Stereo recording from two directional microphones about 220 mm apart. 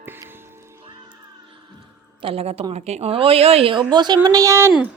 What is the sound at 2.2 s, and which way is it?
A woman's voice, 25° right (ahead or behind).